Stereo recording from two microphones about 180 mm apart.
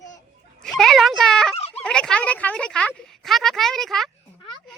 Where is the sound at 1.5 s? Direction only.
35° left (ahead or behind).